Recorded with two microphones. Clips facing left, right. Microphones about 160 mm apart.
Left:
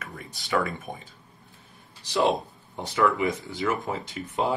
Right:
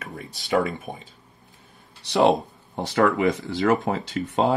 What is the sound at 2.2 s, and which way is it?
Speech, 80° right.